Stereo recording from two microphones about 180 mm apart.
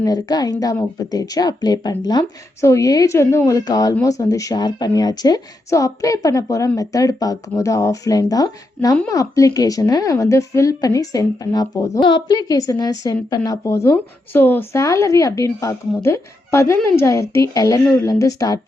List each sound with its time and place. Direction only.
0.0 s speech: 20° left (ahead or behind)